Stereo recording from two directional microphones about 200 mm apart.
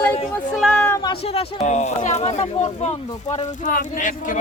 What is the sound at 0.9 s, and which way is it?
Speech, 20° left (ahead or behind).